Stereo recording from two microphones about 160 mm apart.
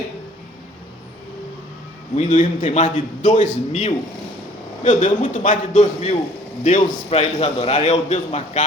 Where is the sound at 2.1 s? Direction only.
45° left (ahead or behind).